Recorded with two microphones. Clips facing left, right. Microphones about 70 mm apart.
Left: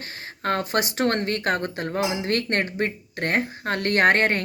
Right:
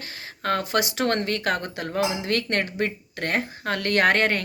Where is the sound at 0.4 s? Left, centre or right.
Left.